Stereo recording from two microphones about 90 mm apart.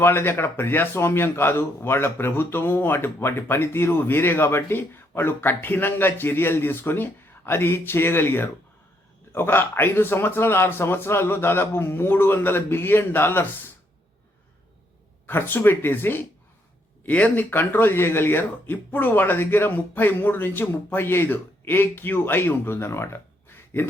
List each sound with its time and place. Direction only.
0.0 s speech: 25° left (ahead or behind)
15.3 s speech: 25° left (ahead or behind)
23.5 s a sound: 25° left (ahead or behind)